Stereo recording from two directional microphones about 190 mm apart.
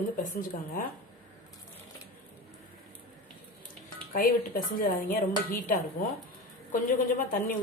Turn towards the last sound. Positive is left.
turn(degrees=45)  # may be behind; listen again after turning